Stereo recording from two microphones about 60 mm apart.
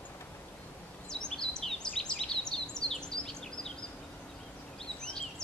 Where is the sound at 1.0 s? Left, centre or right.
Centre.